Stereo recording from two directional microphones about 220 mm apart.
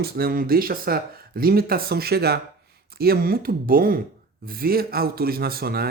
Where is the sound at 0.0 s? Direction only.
45° right (ahead or behind).